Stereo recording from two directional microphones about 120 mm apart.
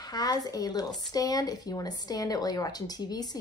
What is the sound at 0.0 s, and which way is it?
A woman's voice, 35° left (ahead or behind).